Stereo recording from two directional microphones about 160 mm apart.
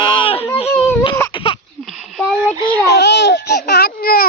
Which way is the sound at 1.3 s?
35° left (ahead or behind).